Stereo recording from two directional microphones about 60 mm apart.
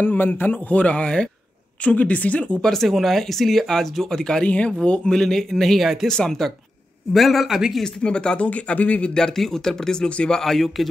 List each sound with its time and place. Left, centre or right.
0.0 s a man's voice: left
2.6 s speech: centre
6.0 s a man's voice: centre
7.8 s a man's voice: centre
9.1 s speech: centre
10.4 s a man's voice: centre